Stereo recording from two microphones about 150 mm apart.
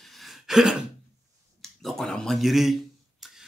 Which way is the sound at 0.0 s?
Centre (ahead or behind).